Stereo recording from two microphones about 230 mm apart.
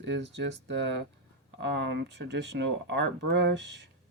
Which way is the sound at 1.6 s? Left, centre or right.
Right.